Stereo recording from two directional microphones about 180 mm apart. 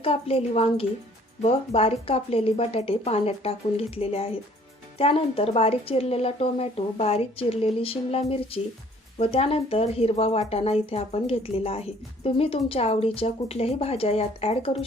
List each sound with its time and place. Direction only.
0.0 s a woman's voice: 30° left (ahead or behind)